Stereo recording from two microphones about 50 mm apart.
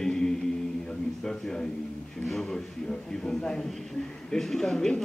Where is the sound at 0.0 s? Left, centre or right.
Centre.